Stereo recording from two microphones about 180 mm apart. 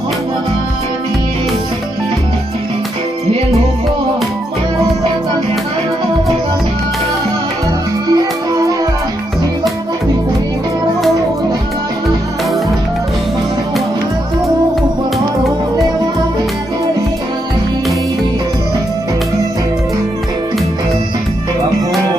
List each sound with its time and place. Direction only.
8.1 s music: 20° right (ahead or behind)